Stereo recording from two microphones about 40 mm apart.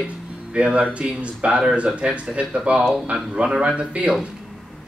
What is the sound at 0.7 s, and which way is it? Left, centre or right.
Speech, right.